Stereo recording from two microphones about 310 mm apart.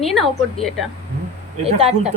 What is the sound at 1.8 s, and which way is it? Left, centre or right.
Speech, centre.